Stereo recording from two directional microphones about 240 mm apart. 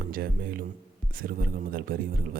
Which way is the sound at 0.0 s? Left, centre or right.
Right.